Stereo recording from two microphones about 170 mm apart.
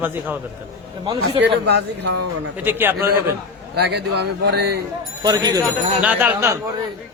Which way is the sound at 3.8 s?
85° right.